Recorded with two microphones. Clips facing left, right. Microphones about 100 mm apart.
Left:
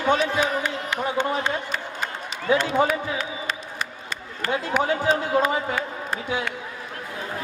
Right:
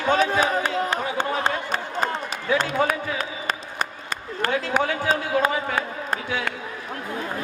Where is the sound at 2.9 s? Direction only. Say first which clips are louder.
Even; 45° right (ahead or behind).